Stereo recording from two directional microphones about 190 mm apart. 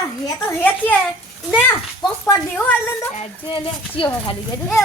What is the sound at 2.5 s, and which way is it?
Speech, 10° left (ahead or behind).